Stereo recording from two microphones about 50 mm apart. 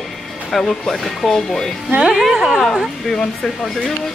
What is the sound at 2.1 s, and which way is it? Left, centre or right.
Speech, centre.